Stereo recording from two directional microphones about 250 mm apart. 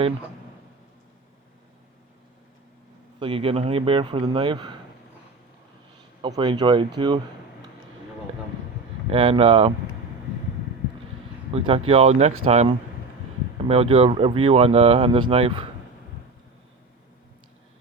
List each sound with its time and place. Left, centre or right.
3.2 s speech: right
6.2 s speech: centre
9.0 s speech: right
11.5 s speech: right